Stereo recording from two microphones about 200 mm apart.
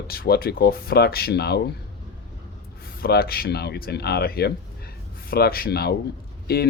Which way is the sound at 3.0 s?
50° left (ahead or behind).